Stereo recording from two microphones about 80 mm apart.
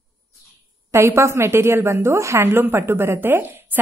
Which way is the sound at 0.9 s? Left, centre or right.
Right.